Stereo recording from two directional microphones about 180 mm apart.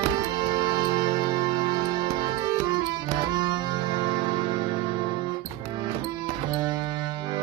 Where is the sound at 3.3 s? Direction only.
25° right (ahead or behind).